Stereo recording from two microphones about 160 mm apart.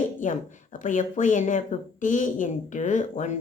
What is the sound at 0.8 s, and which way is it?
A woman's voice, 55° left (ahead or behind).